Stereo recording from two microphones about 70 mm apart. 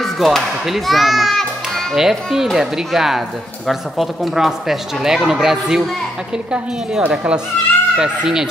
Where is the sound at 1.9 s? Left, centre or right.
Centre.